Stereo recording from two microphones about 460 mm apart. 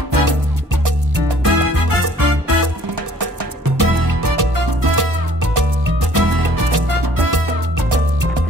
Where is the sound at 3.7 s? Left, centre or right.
Right.